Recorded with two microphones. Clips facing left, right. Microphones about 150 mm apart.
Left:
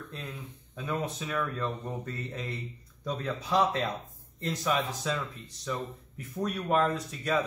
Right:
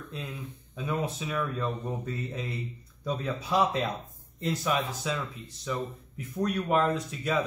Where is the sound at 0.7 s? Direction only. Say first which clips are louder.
Right 2 dB; 5° right (ahead or behind).